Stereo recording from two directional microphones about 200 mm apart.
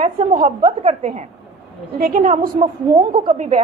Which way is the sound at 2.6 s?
20° right (ahead or behind).